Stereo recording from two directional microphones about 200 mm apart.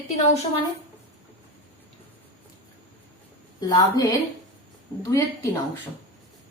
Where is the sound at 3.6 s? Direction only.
20° left (ahead or behind).